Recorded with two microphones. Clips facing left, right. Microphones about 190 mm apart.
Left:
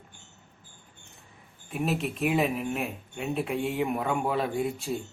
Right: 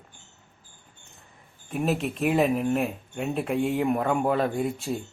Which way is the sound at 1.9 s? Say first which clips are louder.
Right 3 dB; centre (ahead or behind).